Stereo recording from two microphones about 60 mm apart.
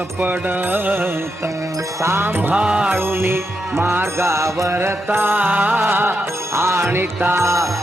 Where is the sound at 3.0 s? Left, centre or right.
Right.